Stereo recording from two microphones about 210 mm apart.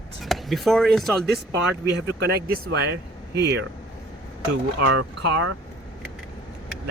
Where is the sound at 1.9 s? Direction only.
55° right (ahead or behind).